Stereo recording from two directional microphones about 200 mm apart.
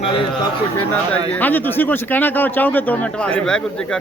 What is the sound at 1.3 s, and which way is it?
Speech, 10° left (ahead or behind).